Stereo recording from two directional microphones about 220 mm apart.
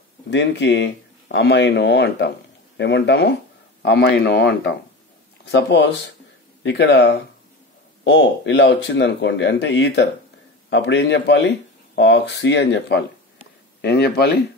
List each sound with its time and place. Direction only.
0.3 s speech: 55° left (ahead or behind)